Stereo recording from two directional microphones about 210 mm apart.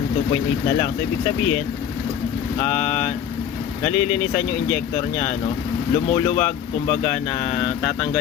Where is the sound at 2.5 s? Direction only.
30° left (ahead or behind).